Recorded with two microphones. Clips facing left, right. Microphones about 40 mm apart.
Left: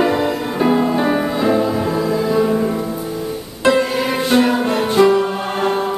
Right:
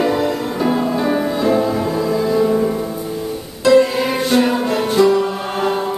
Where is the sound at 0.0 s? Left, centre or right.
Centre.